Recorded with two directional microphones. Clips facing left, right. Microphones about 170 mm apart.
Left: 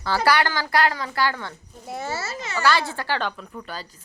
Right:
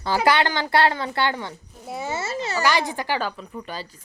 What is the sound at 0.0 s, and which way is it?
A woman's voice, 20° right (ahead or behind).